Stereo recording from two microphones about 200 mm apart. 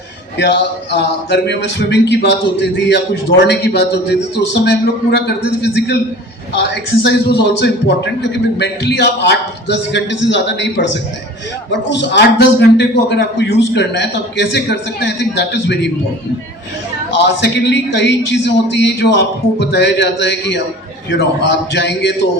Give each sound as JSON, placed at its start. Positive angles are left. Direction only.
{"t": 0.3, "sound": "a man's voice", "side_deg": 60}
{"t": 17.2, "sound": "a man's voice", "side_deg": 60}